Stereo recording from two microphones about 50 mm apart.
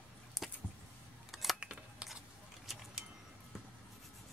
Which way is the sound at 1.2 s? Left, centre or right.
Centre.